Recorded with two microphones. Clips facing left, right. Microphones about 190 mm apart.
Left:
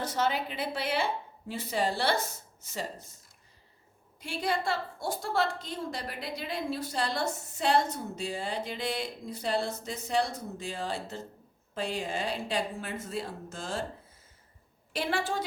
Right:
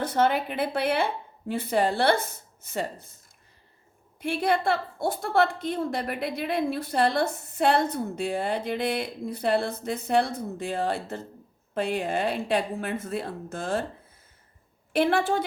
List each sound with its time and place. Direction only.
0.0 s a woman's voice: 55° right (ahead or behind)
4.2 s a woman's voice: 60° right (ahead or behind)
14.9 s a woman's voice: 60° right (ahead or behind)